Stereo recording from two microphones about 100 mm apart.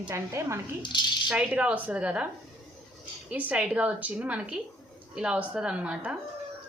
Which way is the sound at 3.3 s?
15° right (ahead or behind).